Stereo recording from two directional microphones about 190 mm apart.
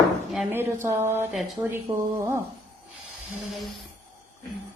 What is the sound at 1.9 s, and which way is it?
Speech, 15° right (ahead or behind).